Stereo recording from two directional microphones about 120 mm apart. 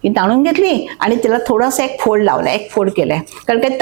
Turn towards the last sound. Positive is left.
turn(degrees=-20)  # may be behind; listen again after turning